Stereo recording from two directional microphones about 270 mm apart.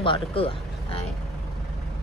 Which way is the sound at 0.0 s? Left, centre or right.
Centre.